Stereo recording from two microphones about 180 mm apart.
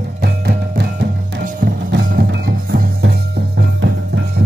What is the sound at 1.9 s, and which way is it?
Music, 70° right (ahead or behind).